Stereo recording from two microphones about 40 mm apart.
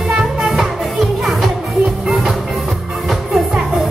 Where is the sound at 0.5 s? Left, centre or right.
Centre.